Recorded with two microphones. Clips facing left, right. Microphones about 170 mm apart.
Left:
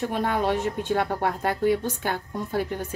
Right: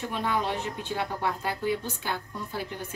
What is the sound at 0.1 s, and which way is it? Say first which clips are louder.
A woman's voice: left 2 dB; 50° left (ahead or behind).